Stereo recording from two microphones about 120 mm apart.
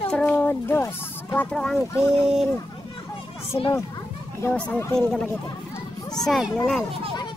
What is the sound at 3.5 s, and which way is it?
Speech, 45° left (ahead or behind).